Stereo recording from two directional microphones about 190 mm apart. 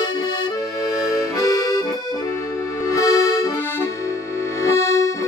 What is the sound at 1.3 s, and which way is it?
Accordion, 20° left (ahead or behind).